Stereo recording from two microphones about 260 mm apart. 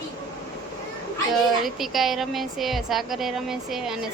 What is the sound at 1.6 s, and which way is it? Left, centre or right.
A woman's voice, centre.